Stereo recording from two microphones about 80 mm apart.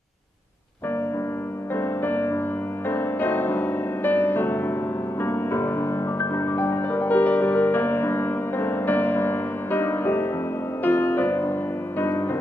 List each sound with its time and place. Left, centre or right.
1.8 s music: left